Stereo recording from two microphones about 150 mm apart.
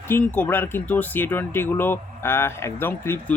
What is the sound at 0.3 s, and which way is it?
Speech, 15° left (ahead or behind).